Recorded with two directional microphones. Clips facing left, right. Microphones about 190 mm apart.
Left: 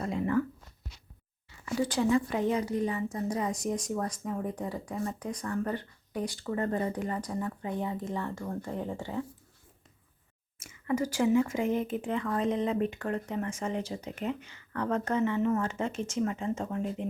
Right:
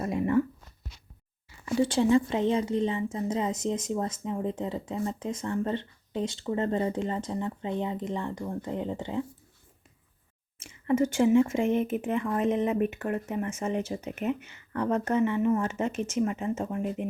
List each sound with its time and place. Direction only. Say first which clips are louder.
0.0 s a sound: right 3 dB; 20° right (ahead or behind)
1.6 s a woman's voice: right 4 dB; 25° right (ahead or behind)
10.6 s a woman's voice: right 5 dB; 25° right (ahead or behind)